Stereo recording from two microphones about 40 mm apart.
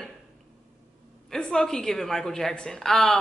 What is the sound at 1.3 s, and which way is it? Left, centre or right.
A woman's voice, centre.